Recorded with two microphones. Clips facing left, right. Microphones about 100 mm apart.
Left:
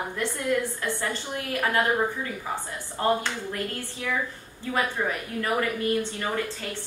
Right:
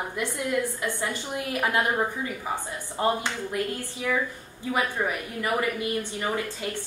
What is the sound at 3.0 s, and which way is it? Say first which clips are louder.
Speech: left 1 dB; 15° right (ahead or behind).